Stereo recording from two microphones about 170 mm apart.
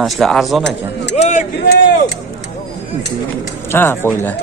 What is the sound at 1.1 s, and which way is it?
Vehicle, 45° left (ahead or behind).